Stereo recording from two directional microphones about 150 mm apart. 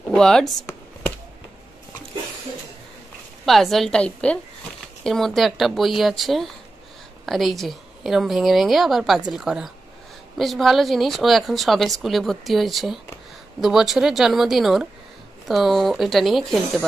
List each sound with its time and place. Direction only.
0.1 s speech: 5° left (ahead or behind)
0.6 s a sound: 20° left (ahead or behind)
3.4 s a woman's voice: centre (ahead or behind)